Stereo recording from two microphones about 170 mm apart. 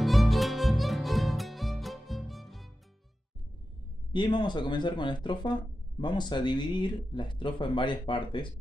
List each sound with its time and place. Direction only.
0.0 s music: centre (ahead or behind)
4.1 s speech: 25° left (ahead or behind)